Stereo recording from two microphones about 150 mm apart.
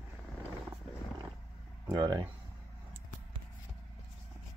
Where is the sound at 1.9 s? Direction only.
25° right (ahead or behind).